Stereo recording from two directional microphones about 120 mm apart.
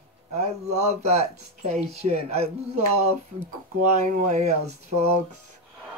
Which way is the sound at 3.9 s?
80° right.